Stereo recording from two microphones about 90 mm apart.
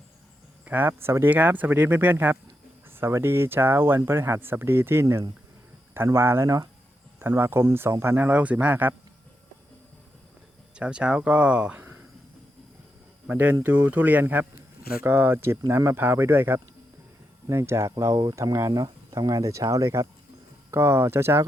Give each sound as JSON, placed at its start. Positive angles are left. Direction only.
{"t": 0.6, "sound": "speech", "side_deg": -20}
{"t": 7.2, "sound": "speech", "side_deg": -25}
{"t": 10.8, "sound": "speech", "side_deg": -10}
{"t": 13.2, "sound": "speech", "side_deg": -20}